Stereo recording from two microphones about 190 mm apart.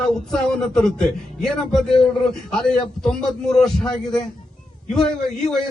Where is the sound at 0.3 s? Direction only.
5° left (ahead or behind).